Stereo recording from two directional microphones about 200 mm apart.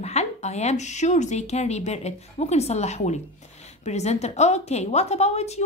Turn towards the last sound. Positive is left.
turn(degrees=30)  # may be behind; listen again after turning